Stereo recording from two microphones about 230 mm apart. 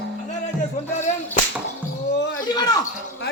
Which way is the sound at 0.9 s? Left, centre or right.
Left.